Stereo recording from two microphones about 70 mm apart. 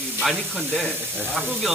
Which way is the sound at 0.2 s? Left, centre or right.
Centre.